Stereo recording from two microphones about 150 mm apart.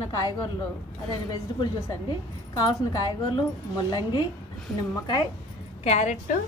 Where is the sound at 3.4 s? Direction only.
25° left (ahead or behind).